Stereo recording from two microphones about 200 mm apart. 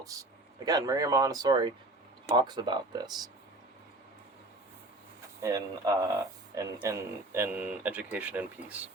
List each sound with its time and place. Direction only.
0.0 s speech: 15° right (ahead or behind)
5.4 s speech: 15° right (ahead or behind)